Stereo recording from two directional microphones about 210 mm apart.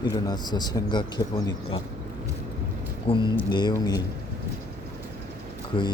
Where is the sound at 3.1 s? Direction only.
25° left (ahead or behind).